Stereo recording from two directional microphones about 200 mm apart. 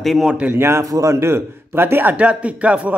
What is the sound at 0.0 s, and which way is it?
A man's voice, centre (ahead or behind).